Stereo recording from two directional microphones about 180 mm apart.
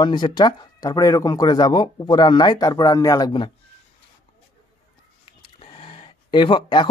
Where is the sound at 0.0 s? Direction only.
25° left (ahead or behind).